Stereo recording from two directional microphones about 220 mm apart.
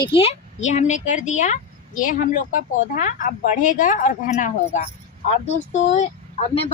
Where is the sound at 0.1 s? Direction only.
25° left (ahead or behind).